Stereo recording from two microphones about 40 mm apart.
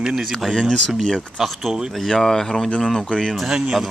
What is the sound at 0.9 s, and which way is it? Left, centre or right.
Speech, centre.